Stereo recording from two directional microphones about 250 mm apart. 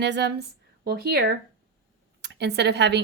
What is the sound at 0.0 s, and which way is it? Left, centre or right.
A woman's voice, right.